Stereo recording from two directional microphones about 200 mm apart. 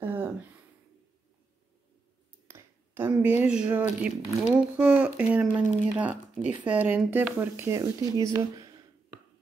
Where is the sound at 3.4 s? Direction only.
5° right (ahead or behind).